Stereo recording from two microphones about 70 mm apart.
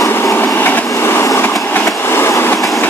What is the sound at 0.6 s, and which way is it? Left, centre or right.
Train, left.